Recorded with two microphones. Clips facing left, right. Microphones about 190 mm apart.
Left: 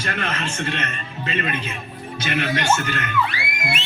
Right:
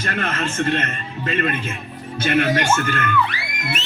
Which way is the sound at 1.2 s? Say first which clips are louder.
Right 3 dB; 45° right (ahead or behind).